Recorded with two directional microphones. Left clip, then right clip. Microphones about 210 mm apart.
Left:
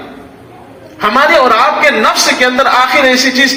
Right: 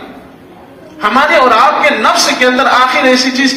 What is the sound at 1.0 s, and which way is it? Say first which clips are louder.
A man's voice: even; 35° left (ahead or behind).